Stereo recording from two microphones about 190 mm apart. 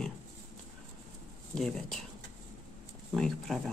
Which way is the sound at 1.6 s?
Centre (ahead or behind).